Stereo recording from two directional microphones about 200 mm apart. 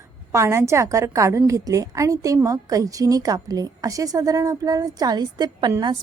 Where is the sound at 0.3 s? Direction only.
15° right (ahead or behind).